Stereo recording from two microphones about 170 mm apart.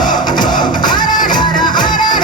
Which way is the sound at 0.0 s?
25° left (ahead or behind).